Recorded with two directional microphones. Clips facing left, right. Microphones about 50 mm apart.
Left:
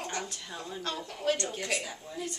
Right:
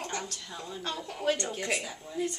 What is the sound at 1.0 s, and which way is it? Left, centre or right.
Speech, centre.